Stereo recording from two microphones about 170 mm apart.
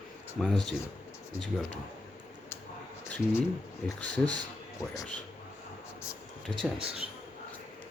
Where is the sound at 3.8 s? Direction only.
5° left (ahead or behind).